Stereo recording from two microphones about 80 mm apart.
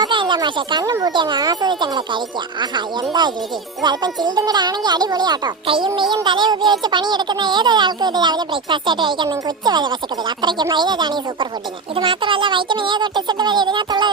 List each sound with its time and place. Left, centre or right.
0.0 s music: right
0.4 s speech: right
11.9 s speech: right